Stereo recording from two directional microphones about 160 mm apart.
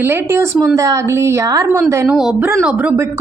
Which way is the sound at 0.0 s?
15° right (ahead or behind).